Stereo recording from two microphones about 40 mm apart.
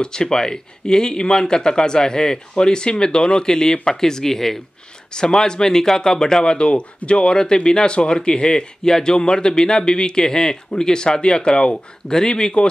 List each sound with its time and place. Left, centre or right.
0.0 s speech: centre